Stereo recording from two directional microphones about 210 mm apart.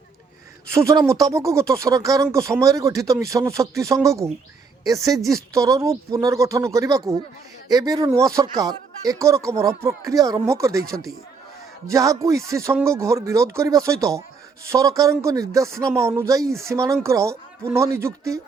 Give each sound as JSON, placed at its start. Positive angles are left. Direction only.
{"t": 0.7, "sound": "speech", "side_deg": -15}
{"t": 11.9, "sound": "speech", "side_deg": -15}